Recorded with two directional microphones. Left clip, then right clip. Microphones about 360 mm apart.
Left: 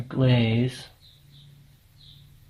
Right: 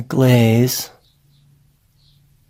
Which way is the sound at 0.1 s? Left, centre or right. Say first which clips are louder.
Right 10 dB; right.